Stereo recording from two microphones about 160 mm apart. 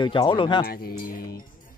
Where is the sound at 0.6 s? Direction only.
70° left (ahead or behind).